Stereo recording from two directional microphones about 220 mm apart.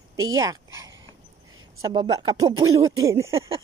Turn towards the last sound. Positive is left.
turn(degrees=-15)  # may be behind; listen again after turning